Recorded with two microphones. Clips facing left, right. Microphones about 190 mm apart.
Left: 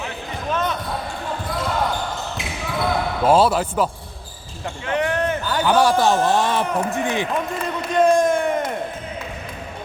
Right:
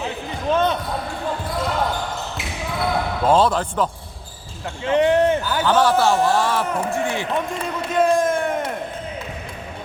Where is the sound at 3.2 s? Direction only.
10° left (ahead or behind).